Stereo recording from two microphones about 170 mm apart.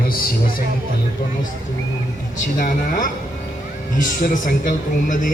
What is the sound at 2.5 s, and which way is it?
Speech, 50° left (ahead or behind).